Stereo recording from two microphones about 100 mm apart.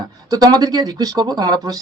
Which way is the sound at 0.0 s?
45° right (ahead or behind).